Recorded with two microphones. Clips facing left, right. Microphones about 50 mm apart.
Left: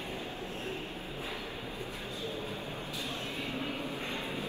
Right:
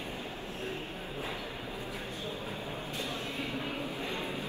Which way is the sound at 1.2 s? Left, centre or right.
Right.